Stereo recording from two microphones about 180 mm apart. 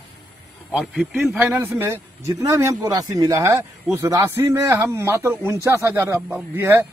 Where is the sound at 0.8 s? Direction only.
Centre (ahead or behind).